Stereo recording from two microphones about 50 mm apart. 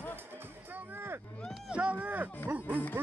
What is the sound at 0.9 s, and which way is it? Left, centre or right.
Run, right.